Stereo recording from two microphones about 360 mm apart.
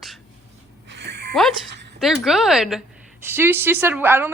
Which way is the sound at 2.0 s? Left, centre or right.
Centre.